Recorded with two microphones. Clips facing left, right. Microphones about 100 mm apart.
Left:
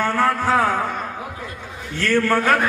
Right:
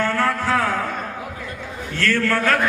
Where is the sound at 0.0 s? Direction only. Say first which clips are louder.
Left 2 dB; 15° left (ahead or behind).